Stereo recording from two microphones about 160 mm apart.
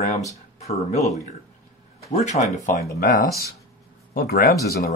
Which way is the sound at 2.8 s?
70° left (ahead or behind).